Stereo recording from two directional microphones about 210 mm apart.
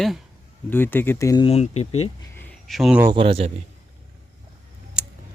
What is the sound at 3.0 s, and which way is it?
Speech, 25° right (ahead or behind).